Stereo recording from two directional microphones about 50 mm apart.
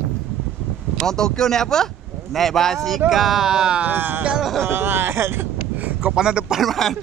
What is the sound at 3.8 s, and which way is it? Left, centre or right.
Speech, right.